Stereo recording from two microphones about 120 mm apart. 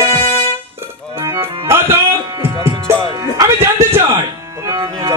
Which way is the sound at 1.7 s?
20° right (ahead or behind).